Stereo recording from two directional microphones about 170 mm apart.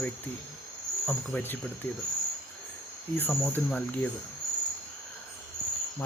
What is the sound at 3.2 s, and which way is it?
Cricket, 10° left (ahead or behind).